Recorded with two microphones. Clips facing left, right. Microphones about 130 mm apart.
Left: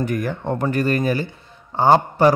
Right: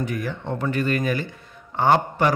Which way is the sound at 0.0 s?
50° left (ahead or behind).